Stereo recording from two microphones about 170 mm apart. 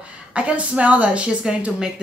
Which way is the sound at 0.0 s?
5° right (ahead or behind).